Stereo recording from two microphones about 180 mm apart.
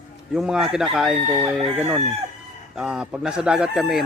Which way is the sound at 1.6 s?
30° right (ahead or behind).